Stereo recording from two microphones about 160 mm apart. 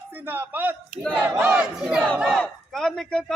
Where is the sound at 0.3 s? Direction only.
10° right (ahead or behind).